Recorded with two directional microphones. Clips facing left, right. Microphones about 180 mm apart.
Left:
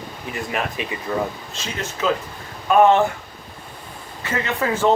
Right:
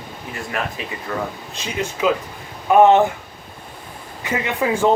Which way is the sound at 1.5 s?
15° right (ahead or behind).